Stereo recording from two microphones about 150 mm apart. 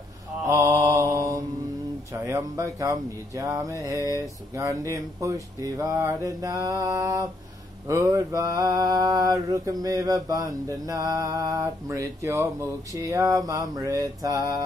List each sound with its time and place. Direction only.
0.5 s mantra: 20° right (ahead or behind)